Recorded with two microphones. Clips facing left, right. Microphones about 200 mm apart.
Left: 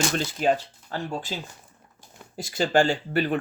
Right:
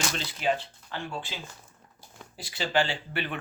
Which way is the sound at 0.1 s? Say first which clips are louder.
Left 5 dB; 45° left (ahead or behind).